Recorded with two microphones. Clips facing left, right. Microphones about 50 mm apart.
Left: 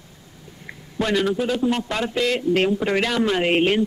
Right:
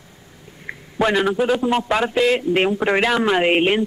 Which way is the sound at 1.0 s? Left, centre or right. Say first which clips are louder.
Right 3 dB; centre.